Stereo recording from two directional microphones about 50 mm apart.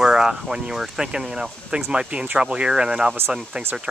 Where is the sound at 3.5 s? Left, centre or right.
Right.